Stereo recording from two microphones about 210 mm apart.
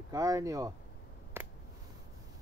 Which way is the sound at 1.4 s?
10° right (ahead or behind).